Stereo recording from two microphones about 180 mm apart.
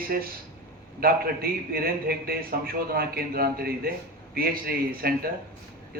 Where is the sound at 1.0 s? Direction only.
60° right (ahead or behind).